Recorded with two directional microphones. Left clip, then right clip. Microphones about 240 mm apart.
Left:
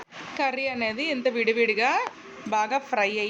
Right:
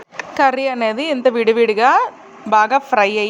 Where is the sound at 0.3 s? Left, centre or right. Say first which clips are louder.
Right 11 dB; right.